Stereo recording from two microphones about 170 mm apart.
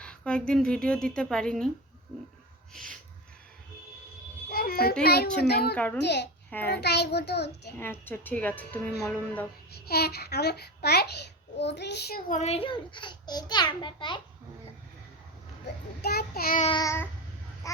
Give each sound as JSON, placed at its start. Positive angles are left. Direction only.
{"t": 0.0, "sound": "speech", "side_deg": 5}
{"t": 2.7, "sound": "speech", "side_deg": 5}
{"t": 4.4, "sound": "a sound", "side_deg": 60}
{"t": 5.0, "sound": "a child's voice", "side_deg": 70}
{"t": 5.7, "sound": "a woman's voice", "side_deg": 10}
{"t": 6.0, "sound": "a child's voice", "side_deg": 85}
{"t": 7.8, "sound": "a woman's voice", "side_deg": 10}
{"t": 9.7, "sound": "a child's voice", "side_deg": 65}
{"t": 11.5, "sound": "a child's voice", "side_deg": 90}
{"t": 12.3, "sound": "a child's voice", "side_deg": 40}
{"t": 16.0, "sound": "child singing", "side_deg": 70}
{"t": 16.6, "sound": "a child's voice", "side_deg": 25}